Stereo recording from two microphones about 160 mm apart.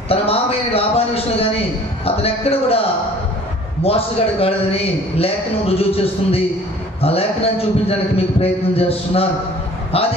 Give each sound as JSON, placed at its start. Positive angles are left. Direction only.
{"t": 0.1, "sound": "a sound", "side_deg": 40}
{"t": 2.0, "sound": "a man's voice", "side_deg": 40}
{"t": 3.8, "sound": "a man's voice", "side_deg": 35}